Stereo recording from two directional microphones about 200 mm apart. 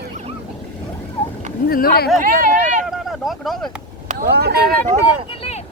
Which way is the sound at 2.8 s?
Centre (ahead or behind).